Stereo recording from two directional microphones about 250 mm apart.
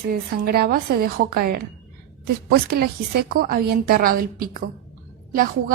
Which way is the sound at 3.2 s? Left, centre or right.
Right.